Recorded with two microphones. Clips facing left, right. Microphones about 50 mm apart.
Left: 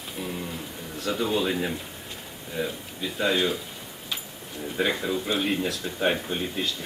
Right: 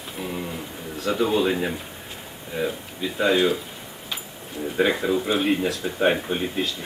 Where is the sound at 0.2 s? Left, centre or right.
Centre.